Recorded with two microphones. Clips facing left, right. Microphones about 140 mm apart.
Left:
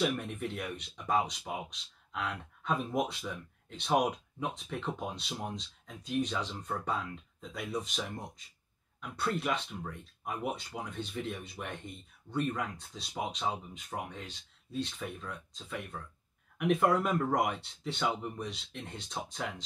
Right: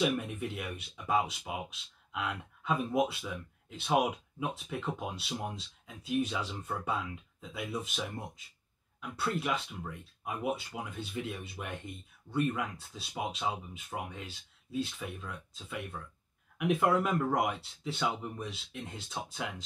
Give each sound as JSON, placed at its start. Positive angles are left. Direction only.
{"t": 0.0, "sound": "speech", "side_deg": -5}
{"t": 9.1, "sound": "speech", "side_deg": -5}